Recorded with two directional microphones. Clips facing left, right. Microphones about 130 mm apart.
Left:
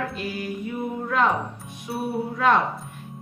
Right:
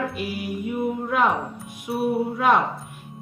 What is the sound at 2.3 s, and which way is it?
Speech, 10° right (ahead or behind).